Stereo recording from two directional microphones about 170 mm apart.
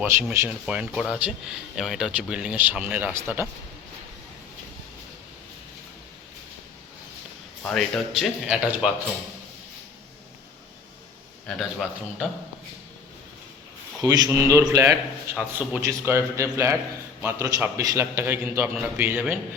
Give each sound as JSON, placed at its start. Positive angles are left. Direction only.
{"t": 0.0, "sound": "speech", "side_deg": -10}
{"t": 7.6, "sound": "speech", "side_deg": 5}
{"t": 11.4, "sound": "speech", "side_deg": 0}
{"t": 14.0, "sound": "speech", "side_deg": -20}